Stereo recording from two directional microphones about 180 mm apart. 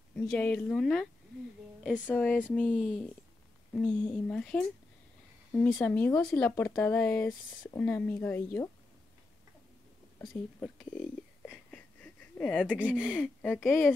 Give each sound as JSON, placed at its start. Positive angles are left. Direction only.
{"t": 0.1, "sound": "speech", "side_deg": 5}
{"t": 10.2, "sound": "speech", "side_deg": 0}
{"t": 11.4, "sound": "a sound", "side_deg": 5}
{"t": 12.7, "sound": "speech", "side_deg": -5}
{"t": 13.5, "sound": "speech", "side_deg": 15}